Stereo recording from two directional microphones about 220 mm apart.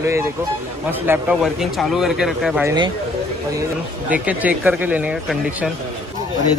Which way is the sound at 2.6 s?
20° right (ahead or behind).